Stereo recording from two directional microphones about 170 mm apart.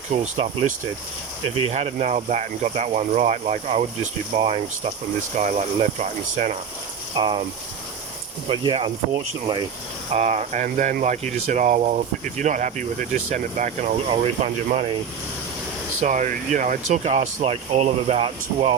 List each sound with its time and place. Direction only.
0.1 s speech: 45° right (ahead or behind)
7.2 s speech: 30° right (ahead or behind)
8.4 s speech: 30° right (ahead or behind)
10.1 s speech: 40° right (ahead or behind)
16.0 s speech: 45° right (ahead or behind)